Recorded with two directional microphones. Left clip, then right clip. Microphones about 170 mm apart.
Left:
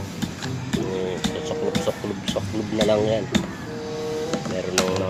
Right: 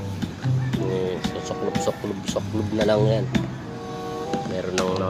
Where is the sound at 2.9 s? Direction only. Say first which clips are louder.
Even; 20° right (ahead or behind).